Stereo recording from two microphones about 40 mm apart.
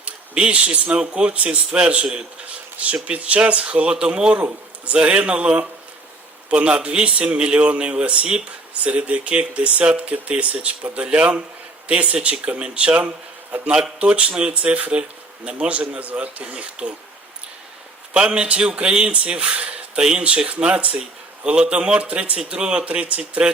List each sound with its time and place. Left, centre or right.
0.0 s a sound: right
0.9 s speech: right
4.4 s speech: right
6.5 s speech: right
18.1 s speech: right